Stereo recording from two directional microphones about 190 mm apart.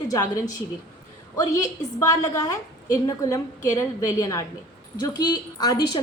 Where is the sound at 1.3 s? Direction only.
20° left (ahead or behind).